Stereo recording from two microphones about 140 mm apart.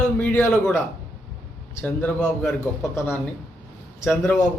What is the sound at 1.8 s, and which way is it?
A man's voice, 5° left (ahead or behind).